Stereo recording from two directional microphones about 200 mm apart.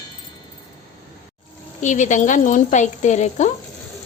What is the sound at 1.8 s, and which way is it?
A woman's voice, 35° left (ahead or behind).